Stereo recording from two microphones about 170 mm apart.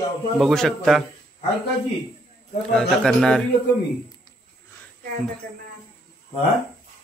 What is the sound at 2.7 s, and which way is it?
Speech, 5° left (ahead or behind).